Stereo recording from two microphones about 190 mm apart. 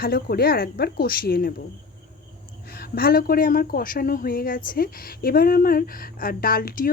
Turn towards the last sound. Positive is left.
turn(degrees=50)  # may be behind; listen again after turning